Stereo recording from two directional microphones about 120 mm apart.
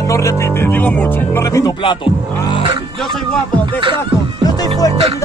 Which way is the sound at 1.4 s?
25° left (ahead or behind).